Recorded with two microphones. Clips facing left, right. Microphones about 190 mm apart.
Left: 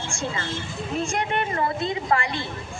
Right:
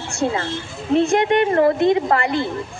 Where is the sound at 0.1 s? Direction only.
65° right (ahead or behind).